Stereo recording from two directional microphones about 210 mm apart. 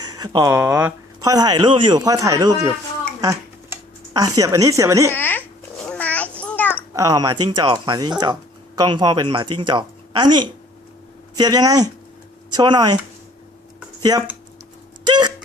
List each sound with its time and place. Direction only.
0.0 s speech: 15° right (ahead or behind)
5.1 s babbling: 10° left (ahead or behind)
6.4 s a sound: 10° left (ahead or behind)
6.9 s speech: 15° right (ahead or behind)
14.1 s speech: 20° right (ahead or behind)
15.0 s hiccup: 20° right (ahead or behind)